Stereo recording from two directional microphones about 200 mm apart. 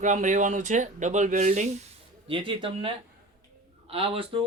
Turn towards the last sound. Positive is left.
turn(degrees=-25)  # may be behind; listen again after turning